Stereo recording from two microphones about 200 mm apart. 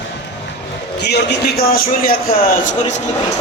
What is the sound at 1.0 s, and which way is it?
A man's voice, 55° left (ahead or behind).